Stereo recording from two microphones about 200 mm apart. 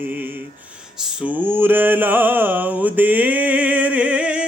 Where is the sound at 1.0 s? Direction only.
5° right (ahead or behind).